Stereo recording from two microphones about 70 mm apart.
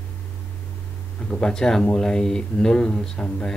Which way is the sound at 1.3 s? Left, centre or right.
Centre.